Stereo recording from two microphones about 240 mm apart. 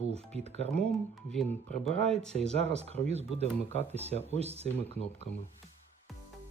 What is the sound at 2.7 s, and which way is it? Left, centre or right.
Speech, right.